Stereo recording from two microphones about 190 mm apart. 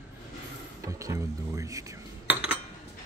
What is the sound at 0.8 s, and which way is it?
Speech, 15° right (ahead or behind).